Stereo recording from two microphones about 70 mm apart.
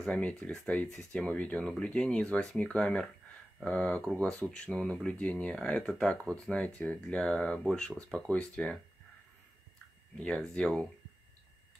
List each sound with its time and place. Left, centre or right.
0.2 s speech: centre
10.2 s speech: centre